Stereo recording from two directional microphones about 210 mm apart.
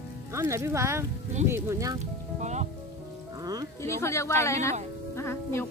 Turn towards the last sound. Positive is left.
turn(degrees=10)  # may be behind; listen again after turning